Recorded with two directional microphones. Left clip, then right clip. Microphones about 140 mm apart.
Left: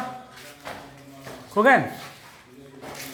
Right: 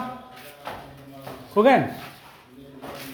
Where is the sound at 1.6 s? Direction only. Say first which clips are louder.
Even; 20° right (ahead or behind).